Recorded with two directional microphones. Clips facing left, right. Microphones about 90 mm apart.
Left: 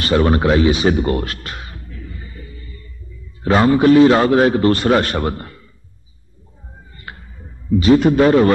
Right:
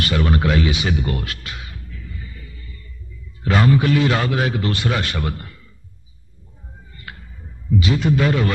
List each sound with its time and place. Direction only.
0.0 s music: 35° left (ahead or behind)
3.4 s a man's voice: 30° left (ahead or behind)
7.1 s a sound: 30° left (ahead or behind)
7.8 s a man's voice: 45° left (ahead or behind)